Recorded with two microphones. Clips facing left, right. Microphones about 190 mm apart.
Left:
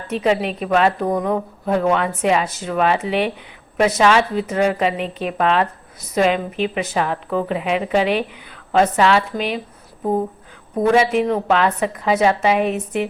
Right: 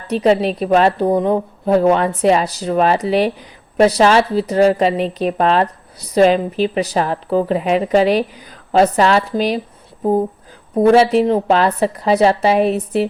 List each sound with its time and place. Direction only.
0.1 s a woman's voice: 35° right (ahead or behind)
10.8 s a woman's voice: 35° right (ahead or behind)